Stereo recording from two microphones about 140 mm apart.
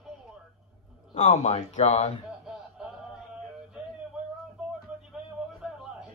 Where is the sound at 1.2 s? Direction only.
55° left (ahead or behind).